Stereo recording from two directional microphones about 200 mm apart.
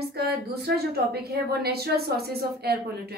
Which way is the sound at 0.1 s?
50° right (ahead or behind).